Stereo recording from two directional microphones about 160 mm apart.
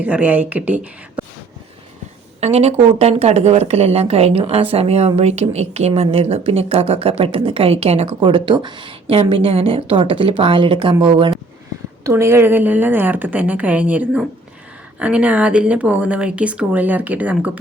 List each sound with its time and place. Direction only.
0.0 s speech: 10° right (ahead or behind)
2.4 s speech: 40° right (ahead or behind)
12.0 s speech: 15° right (ahead or behind)